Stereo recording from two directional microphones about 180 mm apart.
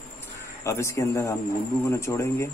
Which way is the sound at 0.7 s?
15° left (ahead or behind).